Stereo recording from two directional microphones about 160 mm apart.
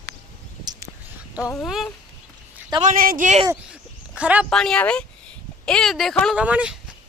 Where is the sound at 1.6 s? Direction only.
Centre (ahead or behind).